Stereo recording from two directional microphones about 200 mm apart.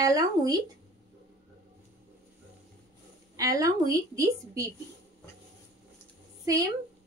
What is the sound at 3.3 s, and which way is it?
A woman's voice, 15° right (ahead or behind).